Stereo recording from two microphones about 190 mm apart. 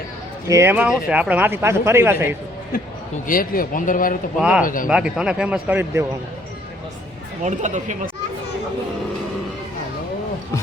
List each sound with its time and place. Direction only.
0.4 s speech: 15° right (ahead or behind)
3.2 s speech: 50° left (ahead or behind)
4.4 s speech: 5° right (ahead or behind)
4.6 s speech: 45° left (ahead or behind)
4.9 s speech: 5° right (ahead or behind)
7.4 s speech: 40° right (ahead or behind)